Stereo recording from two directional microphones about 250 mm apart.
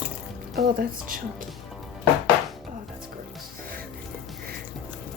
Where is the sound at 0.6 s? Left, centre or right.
Right.